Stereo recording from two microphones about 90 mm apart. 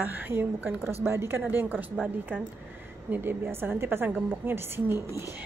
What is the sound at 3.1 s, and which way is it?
A woman's voice, 25° right (ahead or behind).